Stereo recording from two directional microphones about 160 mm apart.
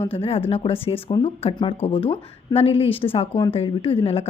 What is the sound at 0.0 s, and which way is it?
Speech, 35° left (ahead or behind).